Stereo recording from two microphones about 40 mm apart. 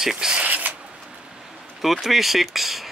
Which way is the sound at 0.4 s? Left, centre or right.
Right.